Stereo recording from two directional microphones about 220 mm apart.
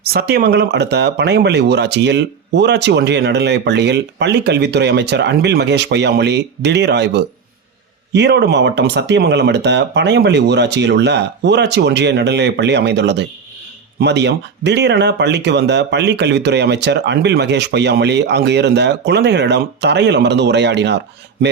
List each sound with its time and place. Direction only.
0.0 s a man's voice: 45° right (ahead or behind)